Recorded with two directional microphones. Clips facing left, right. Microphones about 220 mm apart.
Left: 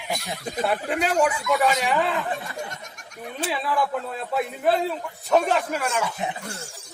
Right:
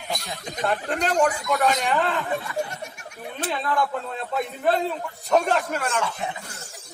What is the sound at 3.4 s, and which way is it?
A man's voice, 5° left (ahead or behind).